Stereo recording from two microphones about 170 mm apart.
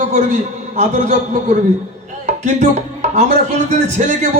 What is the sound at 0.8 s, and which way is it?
Speech, 45° right (ahead or behind).